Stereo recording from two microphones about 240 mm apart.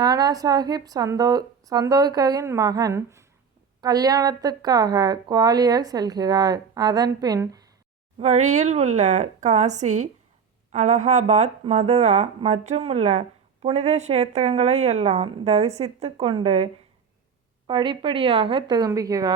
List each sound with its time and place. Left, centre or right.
0.0 s speech: centre
8.2 s speech: right
17.7 s speech: centre